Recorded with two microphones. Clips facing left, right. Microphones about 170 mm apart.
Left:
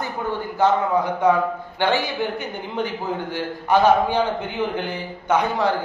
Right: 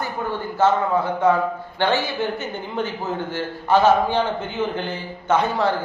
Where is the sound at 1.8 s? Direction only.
15° left (ahead or behind).